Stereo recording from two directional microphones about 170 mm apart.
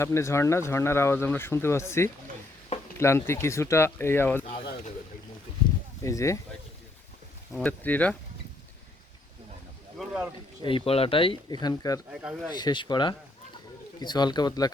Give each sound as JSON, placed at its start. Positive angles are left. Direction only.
{"t": 0.0, "sound": "speech", "side_deg": 15}
{"t": 6.0, "sound": "speech", "side_deg": 20}
{"t": 7.5, "sound": "speech", "side_deg": 10}
{"t": 10.0, "sound": "speech", "side_deg": -10}
{"t": 10.6, "sound": "speech", "side_deg": 30}
{"t": 11.6, "sound": "speech", "side_deg": 20}
{"t": 12.1, "sound": "speech", "side_deg": -5}
{"t": 12.5, "sound": "speech", "side_deg": 25}